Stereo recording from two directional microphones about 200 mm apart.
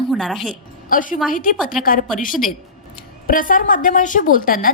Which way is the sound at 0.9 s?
40° left (ahead or behind).